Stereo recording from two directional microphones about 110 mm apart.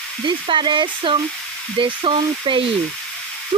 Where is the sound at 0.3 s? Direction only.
45° right (ahead or behind).